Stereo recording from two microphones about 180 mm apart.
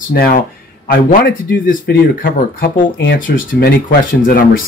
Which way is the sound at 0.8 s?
60° left (ahead or behind).